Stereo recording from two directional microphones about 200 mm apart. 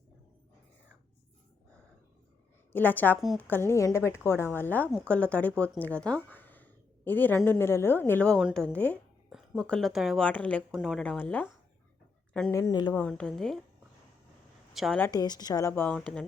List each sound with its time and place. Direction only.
2.7 s a woman's voice: 10° left (ahead or behind)
3.4 s speech: 10° left (ahead or behind)
12.5 s speech: 20° left (ahead or behind)
12.9 s a woman's voice: 5° left (ahead or behind)
14.7 s a woman's voice: centre (ahead or behind)
15.0 s speech: 20° left (ahead or behind)